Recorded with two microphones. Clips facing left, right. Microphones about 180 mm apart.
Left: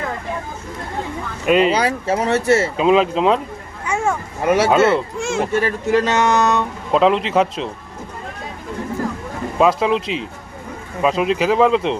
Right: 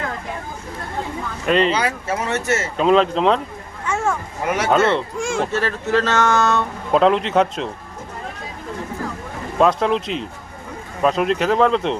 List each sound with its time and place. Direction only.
1.5 s speech: 10° left (ahead or behind)
1.7 s speech: 30° left (ahead or behind)
2.7 s speech: 5° left (ahead or behind)
3.8 s a sound: 10° left (ahead or behind)
4.7 s speech: 5° left (ahead or behind)
6.9 s speech: centre (ahead or behind)
9.6 s speech: centre (ahead or behind)